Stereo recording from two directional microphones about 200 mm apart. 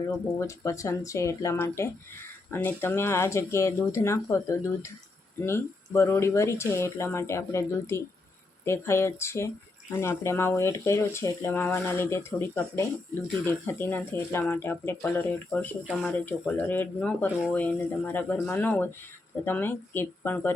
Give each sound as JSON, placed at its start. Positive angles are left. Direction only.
{"t": 0.3, "sound": "speech", "side_deg": 15}